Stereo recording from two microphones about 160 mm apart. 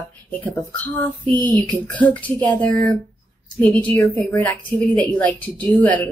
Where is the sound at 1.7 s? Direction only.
10° left (ahead or behind).